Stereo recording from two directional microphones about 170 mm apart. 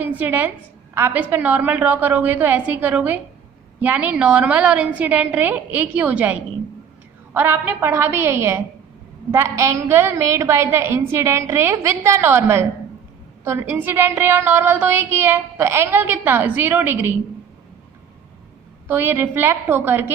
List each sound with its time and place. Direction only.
0.2 s a woman's voice: 10° right (ahead or behind)
7.3 s a woman's voice: 10° right (ahead or behind)
18.9 s a woman's voice: 10° right (ahead or behind)